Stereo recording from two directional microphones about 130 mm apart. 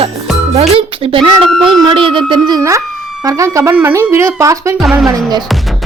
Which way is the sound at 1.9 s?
40° right (ahead or behind).